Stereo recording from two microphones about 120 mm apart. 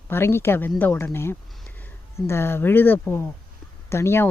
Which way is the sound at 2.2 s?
20° left (ahead or behind).